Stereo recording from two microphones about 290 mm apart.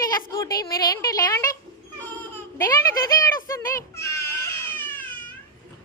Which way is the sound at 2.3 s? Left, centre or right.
Centre.